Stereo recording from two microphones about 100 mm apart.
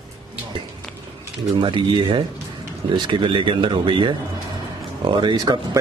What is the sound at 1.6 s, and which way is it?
Speech, 55° right (ahead or behind).